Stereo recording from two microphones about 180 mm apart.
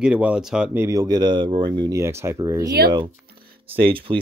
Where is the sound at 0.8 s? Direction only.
20° right (ahead or behind).